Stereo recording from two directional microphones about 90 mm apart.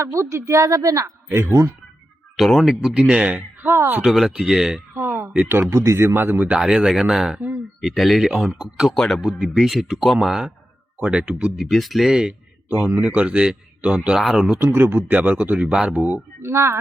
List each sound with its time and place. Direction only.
0.0 s a woman's voice: 35° right (ahead or behind)
2.3 s speech: centre (ahead or behind); by 4.0 s 25° right (ahead or behind)
4.0 s speech: 5° right (ahead or behind)
4.9 s a sound: 25° right (ahead or behind)
5.7 s speech: 30° right (ahead or behind)
6.6 s speech: 5° right (ahead or behind)
12.6 s speech: 20° right (ahead or behind)
14.6 s speech: 25° right (ahead or behind)
16.4 s speech: 30° right (ahead or behind)